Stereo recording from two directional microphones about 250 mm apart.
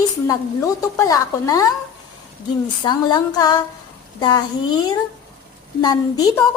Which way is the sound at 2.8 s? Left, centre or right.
Centre.